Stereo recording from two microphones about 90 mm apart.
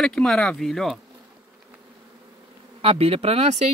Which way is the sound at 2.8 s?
90° right.